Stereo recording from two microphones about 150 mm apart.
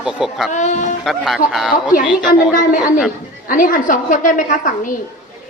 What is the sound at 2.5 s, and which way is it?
A woman's voice, 65° left (ahead or behind).